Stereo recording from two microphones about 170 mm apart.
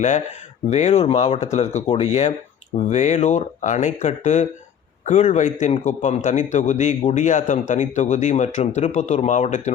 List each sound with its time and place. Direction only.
0.7 s a man's voice: 40° left (ahead or behind)